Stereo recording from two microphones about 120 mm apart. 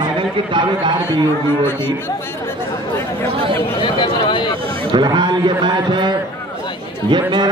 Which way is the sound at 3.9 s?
45° left (ahead or behind).